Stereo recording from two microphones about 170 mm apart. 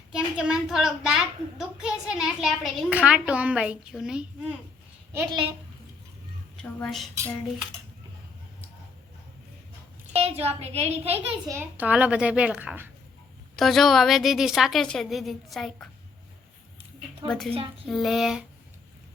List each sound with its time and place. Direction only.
0.1 s a child's voice: 5° right (ahead or behind)
6.6 s a woman's voice: 5° left (ahead or behind)
10.2 s a child's voice: 35° right (ahead or behind)
11.4 s a child's voice: 15° right (ahead or behind)
13.6 s a woman's voice: centre (ahead or behind)
17.2 s a woman's voice: 5° left (ahead or behind)